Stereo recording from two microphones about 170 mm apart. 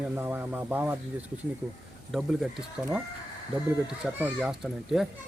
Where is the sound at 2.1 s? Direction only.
5° right (ahead or behind).